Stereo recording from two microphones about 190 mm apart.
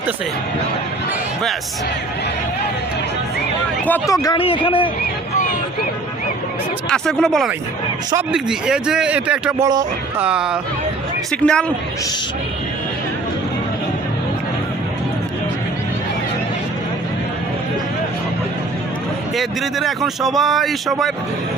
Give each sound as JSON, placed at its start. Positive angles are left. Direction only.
{"t": 4.1, "sound": "a man's voice", "side_deg": 20}
{"t": 6.9, "sound": "speech", "side_deg": 5}
{"t": 9.6, "sound": "speech", "side_deg": -20}
{"t": 10.2, "sound": "speech", "side_deg": -5}
{"t": 19.4, "sound": "speech", "side_deg": 0}